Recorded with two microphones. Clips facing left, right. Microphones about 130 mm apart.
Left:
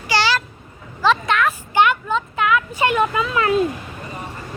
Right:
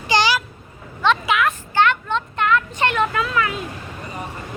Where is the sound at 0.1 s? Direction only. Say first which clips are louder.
Right 1 dB; 15° right (ahead or behind).